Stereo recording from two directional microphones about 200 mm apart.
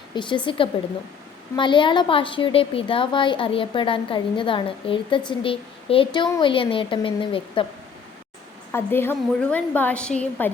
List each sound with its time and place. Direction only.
0.1 s a woman's voice: 25° left (ahead or behind)
8.7 s a woman's voice: 10° left (ahead or behind)